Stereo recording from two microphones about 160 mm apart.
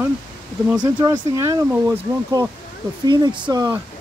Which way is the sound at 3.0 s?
25° right (ahead or behind).